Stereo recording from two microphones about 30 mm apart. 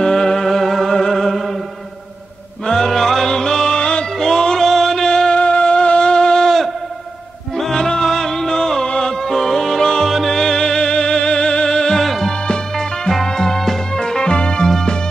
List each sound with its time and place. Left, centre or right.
0.0 s music: centre
1.3 s chant: centre
2.6 s music: centre
4.6 s music: centre
5.1 s music: left
5.4 s music: left
7.5 s music: centre
8.8 s music: left
9.1 s music: centre
10.3 s music: centre
12.0 s music: centre
12.3 s music: left
13.9 s music: left